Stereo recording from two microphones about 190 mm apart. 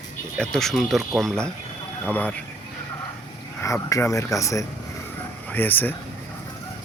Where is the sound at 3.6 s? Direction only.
15° left (ahead or behind).